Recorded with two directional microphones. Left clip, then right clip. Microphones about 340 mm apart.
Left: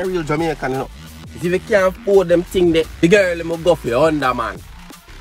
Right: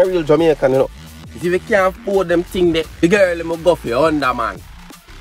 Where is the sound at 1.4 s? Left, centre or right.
Centre.